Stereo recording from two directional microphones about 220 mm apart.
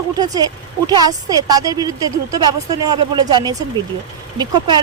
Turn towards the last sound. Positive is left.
turn(degrees=-20)  # may be behind; listen again after turning